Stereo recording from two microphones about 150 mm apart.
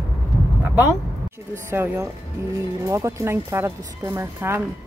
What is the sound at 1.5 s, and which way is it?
Speech, 15° right (ahead or behind).